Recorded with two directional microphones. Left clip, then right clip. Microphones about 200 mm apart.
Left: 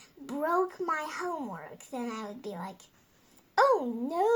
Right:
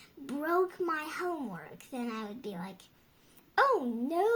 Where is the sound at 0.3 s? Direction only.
25° right (ahead or behind).